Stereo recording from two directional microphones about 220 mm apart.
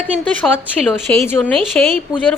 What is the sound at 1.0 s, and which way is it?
Speech, 10° left (ahead or behind).